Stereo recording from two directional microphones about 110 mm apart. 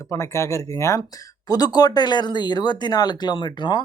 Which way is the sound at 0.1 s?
25° left (ahead or behind).